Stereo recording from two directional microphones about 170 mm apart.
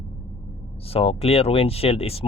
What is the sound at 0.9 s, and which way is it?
Speech, 35° left (ahead or behind).